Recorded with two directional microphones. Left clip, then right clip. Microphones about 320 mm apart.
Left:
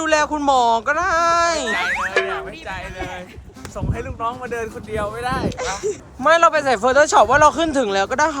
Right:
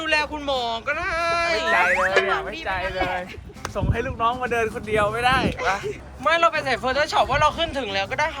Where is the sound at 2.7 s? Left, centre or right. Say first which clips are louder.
Right 7 dB; right.